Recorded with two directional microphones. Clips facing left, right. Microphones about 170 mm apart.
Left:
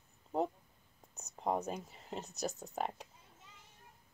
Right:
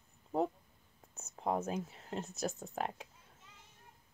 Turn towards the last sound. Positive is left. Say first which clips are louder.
# even
turn(degrees=0)  # may be behind; listen again after turning